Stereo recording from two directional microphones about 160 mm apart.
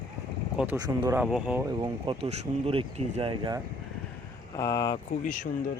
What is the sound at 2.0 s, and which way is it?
Speech, 40° right (ahead or behind).